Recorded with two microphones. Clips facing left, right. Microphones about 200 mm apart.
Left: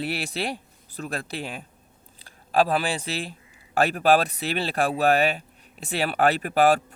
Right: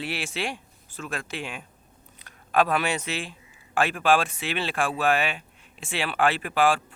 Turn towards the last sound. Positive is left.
turn(degrees=40)  # may be behind; listen again after turning